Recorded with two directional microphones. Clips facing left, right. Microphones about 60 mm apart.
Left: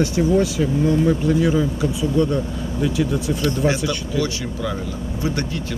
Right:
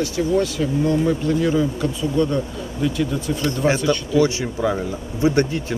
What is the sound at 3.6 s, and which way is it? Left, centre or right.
Speech, right.